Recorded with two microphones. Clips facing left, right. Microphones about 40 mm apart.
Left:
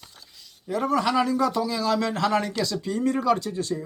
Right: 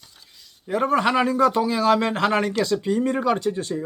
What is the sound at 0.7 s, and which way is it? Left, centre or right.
A man's voice, right.